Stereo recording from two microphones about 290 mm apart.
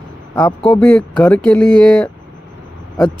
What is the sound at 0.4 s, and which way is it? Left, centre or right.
Speech, centre.